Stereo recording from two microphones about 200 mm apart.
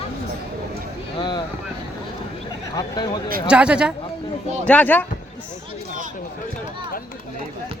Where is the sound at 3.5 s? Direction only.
5° right (ahead or behind).